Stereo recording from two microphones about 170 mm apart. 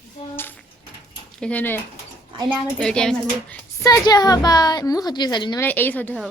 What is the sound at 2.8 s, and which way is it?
Speech, 5° left (ahead or behind).